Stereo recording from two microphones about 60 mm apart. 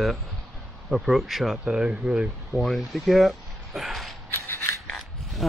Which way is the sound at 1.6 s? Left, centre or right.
Centre.